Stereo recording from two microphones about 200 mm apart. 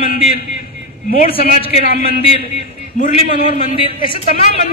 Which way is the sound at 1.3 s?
30° left (ahead or behind).